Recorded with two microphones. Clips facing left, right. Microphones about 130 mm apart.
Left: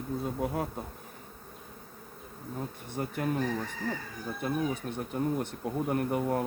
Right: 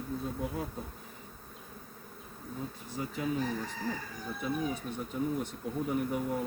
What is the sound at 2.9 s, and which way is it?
Speech, 55° left (ahead or behind).